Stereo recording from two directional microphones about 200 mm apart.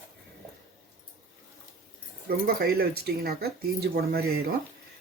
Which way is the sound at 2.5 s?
50° right (ahead or behind).